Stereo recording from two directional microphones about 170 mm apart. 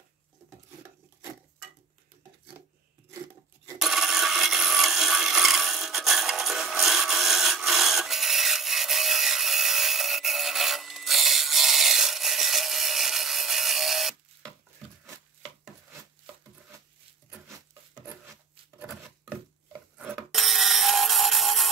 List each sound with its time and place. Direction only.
3.7 s wood: centre (ahead or behind)
18.8 s a sound: 5° right (ahead or behind)
20.2 s music: centre (ahead or behind)